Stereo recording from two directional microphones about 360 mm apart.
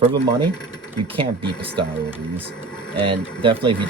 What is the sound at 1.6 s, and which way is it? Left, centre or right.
Speech, centre.